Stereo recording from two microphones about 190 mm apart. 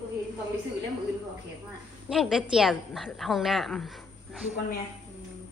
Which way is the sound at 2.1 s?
Centre (ahead or behind).